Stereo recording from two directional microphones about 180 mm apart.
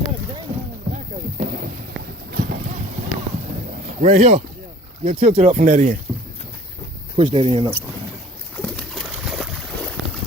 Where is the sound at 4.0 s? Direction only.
40° right (ahead or behind).